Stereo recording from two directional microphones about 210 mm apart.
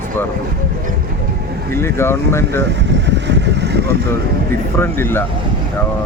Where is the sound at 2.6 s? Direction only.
55° right (ahead or behind).